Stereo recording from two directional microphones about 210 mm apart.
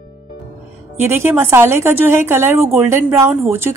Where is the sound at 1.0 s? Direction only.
10° right (ahead or behind).